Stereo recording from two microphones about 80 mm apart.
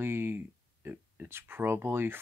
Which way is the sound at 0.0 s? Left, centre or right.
Right.